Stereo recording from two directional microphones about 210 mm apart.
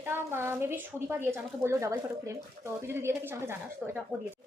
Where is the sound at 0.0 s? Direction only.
10° right (ahead or behind).